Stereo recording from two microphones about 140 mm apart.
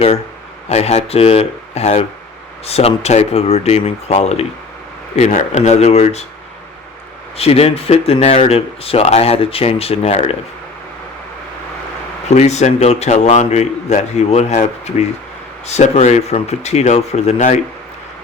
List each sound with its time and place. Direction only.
0.7 s speech: 50° left (ahead or behind)
7.3 s speech: 45° left (ahead or behind)
12.3 s speech: 55° left (ahead or behind)